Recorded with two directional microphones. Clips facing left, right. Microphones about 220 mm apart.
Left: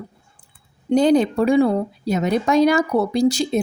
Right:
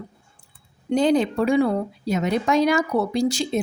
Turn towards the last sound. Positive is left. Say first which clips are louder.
# left 4 dB
turn(degrees=35)  # may be behind; listen again after turning